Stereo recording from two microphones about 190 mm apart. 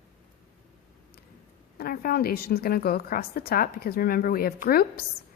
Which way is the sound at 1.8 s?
50° left (ahead or behind).